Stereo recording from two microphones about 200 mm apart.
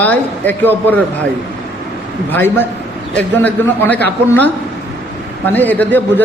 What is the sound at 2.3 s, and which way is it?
A man's voice, 10° left (ahead or behind).